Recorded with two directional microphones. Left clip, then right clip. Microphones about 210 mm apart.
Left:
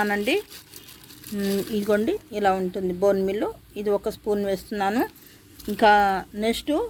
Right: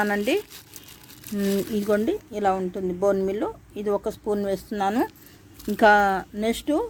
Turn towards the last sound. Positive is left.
turn(degrees=-10)  # may be behind; listen again after turning